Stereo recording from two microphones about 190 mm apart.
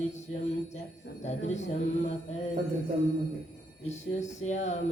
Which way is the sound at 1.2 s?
35° left (ahead or behind).